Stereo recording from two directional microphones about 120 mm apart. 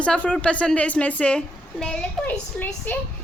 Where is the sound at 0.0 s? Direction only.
10° left (ahead or behind).